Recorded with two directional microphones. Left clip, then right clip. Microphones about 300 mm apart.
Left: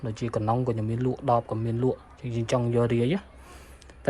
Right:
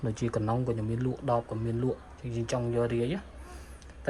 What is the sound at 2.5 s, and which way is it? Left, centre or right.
Speech, left.